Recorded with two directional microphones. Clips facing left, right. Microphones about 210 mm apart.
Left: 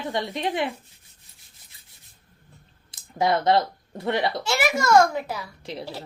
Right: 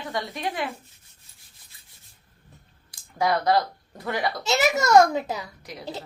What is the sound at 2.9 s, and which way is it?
Speech, 25° left (ahead or behind).